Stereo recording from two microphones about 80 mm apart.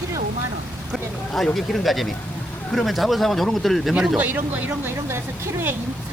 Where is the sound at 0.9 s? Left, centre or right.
Centre.